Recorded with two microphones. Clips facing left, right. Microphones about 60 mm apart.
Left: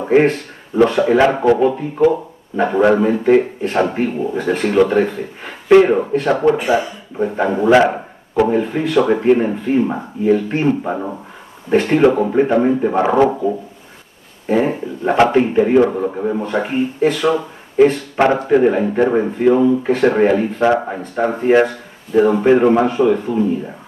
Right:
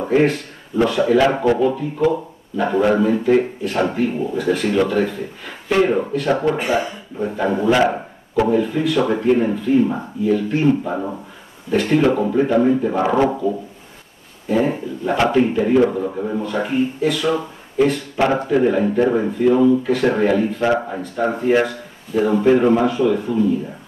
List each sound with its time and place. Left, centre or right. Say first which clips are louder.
0.8 s a man's voice: left 2 dB; left
7.4 s a man's voice: left 1 dB; left
8.5 s a man's voice: even; left
14.5 s a man's voice: left 2 dB; left